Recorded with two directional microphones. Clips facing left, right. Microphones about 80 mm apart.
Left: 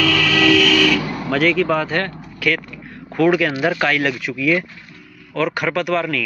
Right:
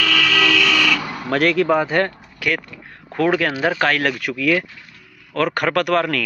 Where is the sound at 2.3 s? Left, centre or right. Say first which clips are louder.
Left 4 dB; right.